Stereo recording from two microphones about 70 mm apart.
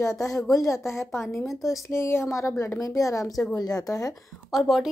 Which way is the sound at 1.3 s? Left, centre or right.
Centre.